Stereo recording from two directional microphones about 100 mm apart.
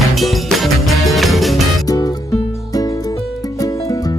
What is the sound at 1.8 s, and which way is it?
Music, 40° left (ahead or behind).